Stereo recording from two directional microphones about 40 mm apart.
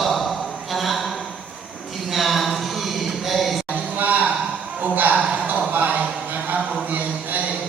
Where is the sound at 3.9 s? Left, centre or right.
Right.